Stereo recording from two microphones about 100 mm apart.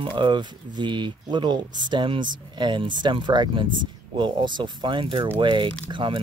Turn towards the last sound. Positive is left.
turn(degrees=-55)  # may be behind; listen again after turning